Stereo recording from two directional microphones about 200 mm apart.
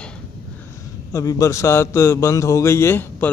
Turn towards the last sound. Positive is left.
turn(degrees=10)  # may be behind; listen again after turning